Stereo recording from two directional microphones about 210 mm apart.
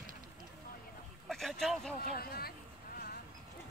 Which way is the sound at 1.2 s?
Centre (ahead or behind).